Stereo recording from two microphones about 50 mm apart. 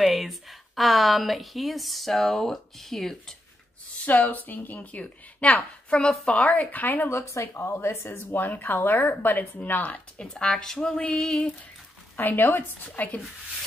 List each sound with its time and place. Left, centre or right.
0.0 s speech: centre
4.0 s a woman's voice: left
5.9 s speech: centre
6.3 s a woman's voice: left
7.1 s speech: left
7.5 s a woman's voice: left
10.2 s speech: centre
11.1 s a sound: left
12.2 s a woman's voice: left